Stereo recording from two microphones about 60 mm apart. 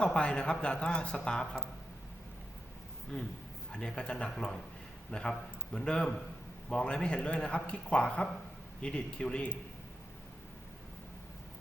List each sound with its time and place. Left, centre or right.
0.0 s speech: centre
3.1 s speech: centre